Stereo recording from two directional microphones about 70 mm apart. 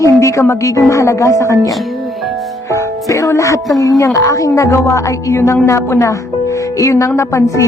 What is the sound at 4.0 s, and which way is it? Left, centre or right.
A woman's voice, left.